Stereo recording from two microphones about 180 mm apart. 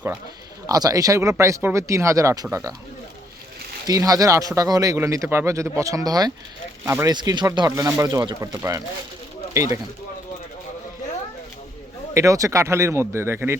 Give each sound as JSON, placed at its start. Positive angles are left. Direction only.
{"t": 0.7, "sound": "speech", "side_deg": -20}
{"t": 3.8, "sound": "speech", "side_deg": -20}
{"t": 12.1, "sound": "speech", "side_deg": -15}